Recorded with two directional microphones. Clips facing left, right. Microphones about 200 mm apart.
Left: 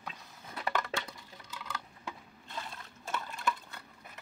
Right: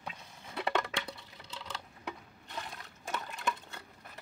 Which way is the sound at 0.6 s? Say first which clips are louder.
Right 2 dB; 25° right (ahead or behind).